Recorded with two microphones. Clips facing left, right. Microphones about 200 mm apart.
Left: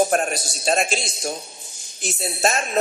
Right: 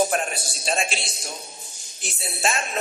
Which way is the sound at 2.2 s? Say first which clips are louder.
Left 4 dB; 40° left (ahead or behind).